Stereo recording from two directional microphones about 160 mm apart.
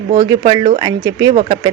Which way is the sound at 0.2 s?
25° right (ahead or behind).